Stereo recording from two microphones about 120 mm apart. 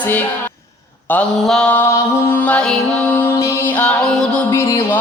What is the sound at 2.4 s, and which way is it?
Music, 10° left (ahead or behind).